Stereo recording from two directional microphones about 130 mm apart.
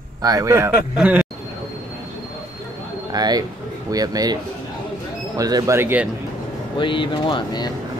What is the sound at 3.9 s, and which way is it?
Speech, 30° right (ahead or behind).